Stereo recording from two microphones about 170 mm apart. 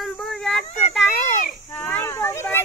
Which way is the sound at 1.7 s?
10° left (ahead or behind).